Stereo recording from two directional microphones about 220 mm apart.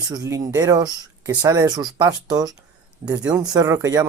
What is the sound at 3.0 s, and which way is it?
Speech, 5° right (ahead or behind).